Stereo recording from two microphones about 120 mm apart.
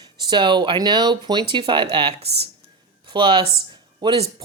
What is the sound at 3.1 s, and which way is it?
Speech, 45° right (ahead or behind).